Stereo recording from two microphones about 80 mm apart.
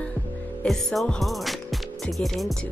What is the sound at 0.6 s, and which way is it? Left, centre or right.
Speech, centre.